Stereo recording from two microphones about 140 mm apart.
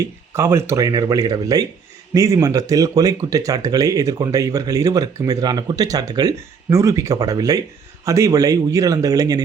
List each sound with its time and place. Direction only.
0.0 s speech: 20° right (ahead or behind)